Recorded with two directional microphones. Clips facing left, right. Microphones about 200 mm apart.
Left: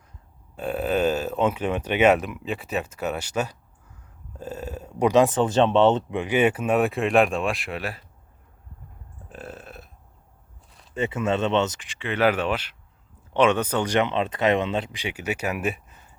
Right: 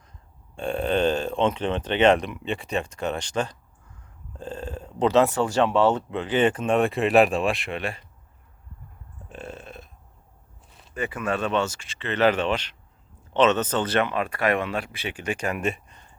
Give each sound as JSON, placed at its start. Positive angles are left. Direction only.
{"t": 0.5, "sound": "speech", "side_deg": 5}
{"t": 9.3, "sound": "burping", "side_deg": 5}
{"t": 10.7, "sound": "a sound", "side_deg": 0}
{"t": 10.9, "sound": "speech", "side_deg": 25}